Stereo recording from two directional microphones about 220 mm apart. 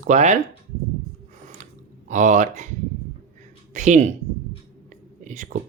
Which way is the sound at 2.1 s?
35° right (ahead or behind).